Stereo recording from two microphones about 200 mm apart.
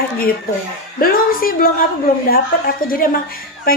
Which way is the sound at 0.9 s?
45° left (ahead or behind).